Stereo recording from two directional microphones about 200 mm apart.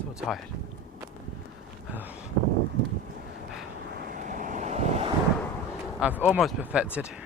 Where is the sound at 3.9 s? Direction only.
50° right (ahead or behind).